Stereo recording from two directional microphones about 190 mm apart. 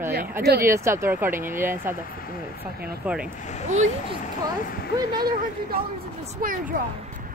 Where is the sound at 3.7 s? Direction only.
40° right (ahead or behind).